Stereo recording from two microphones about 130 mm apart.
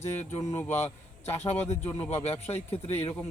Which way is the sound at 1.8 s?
15° left (ahead or behind).